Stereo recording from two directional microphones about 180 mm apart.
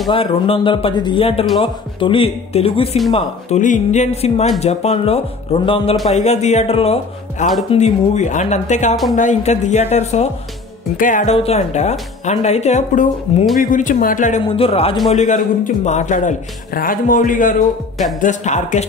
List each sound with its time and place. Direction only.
0.1 s a man's voice: 30° left (ahead or behind); by 11.3 s 45° left (ahead or behind)
11.3 s a man's voice: 35° left (ahead or behind)
14.4 s a man's voice: 30° left (ahead or behind)